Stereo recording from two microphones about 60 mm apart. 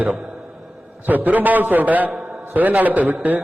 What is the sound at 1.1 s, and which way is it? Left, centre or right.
A man's voice, right.